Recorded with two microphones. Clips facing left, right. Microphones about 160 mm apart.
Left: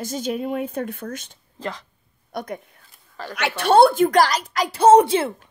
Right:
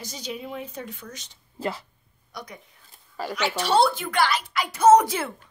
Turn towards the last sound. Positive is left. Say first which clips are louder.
# left 3 dB
turn(degrees=25)  # may be behind; listen again after turning